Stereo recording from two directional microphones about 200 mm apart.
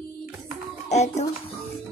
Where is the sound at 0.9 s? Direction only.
35° left (ahead or behind).